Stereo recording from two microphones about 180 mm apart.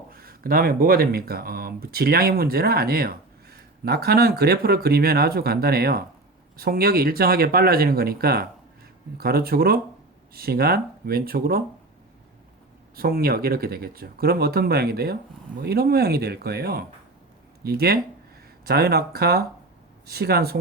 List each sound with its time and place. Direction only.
0.1 s speech: 55° right (ahead or behind)
13.0 s speech: 55° right (ahead or behind)